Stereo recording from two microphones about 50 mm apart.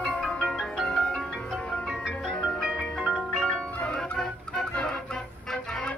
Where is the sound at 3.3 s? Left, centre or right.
Centre.